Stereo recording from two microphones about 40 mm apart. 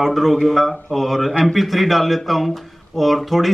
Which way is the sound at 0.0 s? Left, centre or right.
Centre.